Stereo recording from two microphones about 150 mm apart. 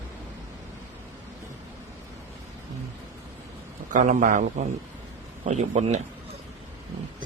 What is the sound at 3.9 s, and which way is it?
Speech, 60° right (ahead or behind).